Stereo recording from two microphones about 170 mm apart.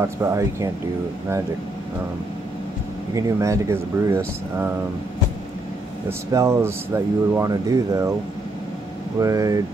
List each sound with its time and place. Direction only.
0.0 s speech: 15° right (ahead or behind)
3.2 s speech: 20° right (ahead or behind)
6.0 s speech: 15° right (ahead or behind)
9.2 s speech: 20° right (ahead or behind)